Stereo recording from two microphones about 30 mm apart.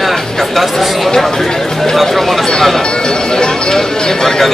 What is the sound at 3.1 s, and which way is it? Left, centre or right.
Speech, left.